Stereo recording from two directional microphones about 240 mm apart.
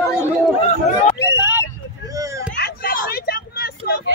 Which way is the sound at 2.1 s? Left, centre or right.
Centre.